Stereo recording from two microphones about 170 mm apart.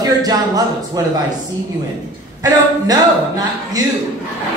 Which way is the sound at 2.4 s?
20° right (ahead or behind).